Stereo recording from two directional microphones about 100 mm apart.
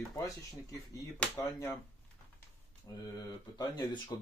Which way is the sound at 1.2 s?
15° left (ahead or behind).